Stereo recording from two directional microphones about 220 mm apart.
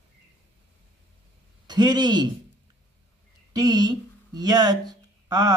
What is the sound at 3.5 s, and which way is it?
Speech, 15° right (ahead or behind).